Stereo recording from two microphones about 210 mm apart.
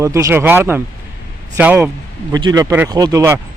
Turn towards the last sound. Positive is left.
turn(degrees=-15)  # may be behind; listen again after turning